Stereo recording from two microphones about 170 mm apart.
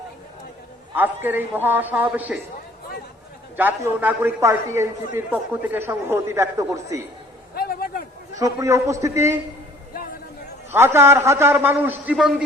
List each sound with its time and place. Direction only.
0.9 s a man's voice: 10° right (ahead or behind)
3.6 s a man's voice: 10° right (ahead or behind)
7.5 s a sound: 60° left (ahead or behind)
8.4 s a man's voice: 20° right (ahead or behind)
10.7 s a man's voice: 15° right (ahead or behind)